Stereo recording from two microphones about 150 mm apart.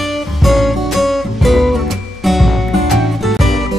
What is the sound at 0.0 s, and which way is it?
Music, centre (ahead or behind).